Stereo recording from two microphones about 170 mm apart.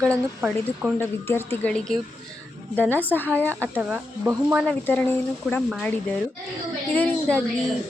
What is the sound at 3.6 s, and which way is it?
A woman's voice, 10° right (ahead or behind).